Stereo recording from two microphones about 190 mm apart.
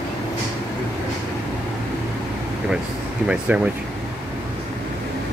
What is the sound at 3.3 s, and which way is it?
Speech, 5° right (ahead or behind).